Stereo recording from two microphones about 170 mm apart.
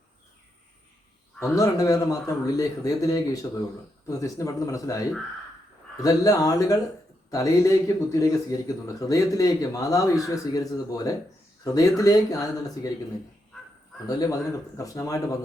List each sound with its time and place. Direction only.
1.5 s speech: 20° left (ahead or behind)
14.1 s speech: 20° left (ahead or behind)